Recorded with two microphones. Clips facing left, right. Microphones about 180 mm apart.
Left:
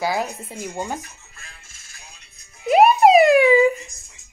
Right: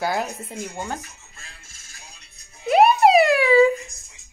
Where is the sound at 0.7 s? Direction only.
15° left (ahead or behind).